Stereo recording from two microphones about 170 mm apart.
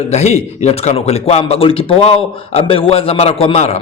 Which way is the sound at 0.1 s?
40° left (ahead or behind).